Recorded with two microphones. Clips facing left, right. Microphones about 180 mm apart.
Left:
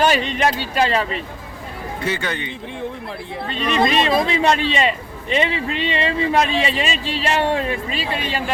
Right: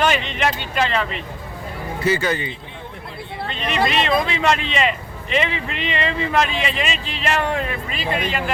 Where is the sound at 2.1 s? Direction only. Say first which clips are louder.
Right 5 dB; 5° right (ahead or behind).